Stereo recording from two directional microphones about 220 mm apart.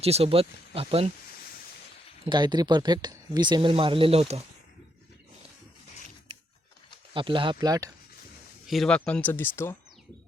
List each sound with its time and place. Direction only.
0.0 s speech: 25° right (ahead or behind)
2.2 s speech: 20° right (ahead or behind)
7.1 s speech: 25° right (ahead or behind)
8.6 s speech: centre (ahead or behind)